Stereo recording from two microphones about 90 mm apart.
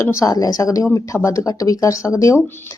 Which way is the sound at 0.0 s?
35° left (ahead or behind).